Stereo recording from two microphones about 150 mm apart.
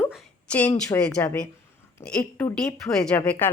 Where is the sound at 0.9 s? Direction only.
25° left (ahead or behind).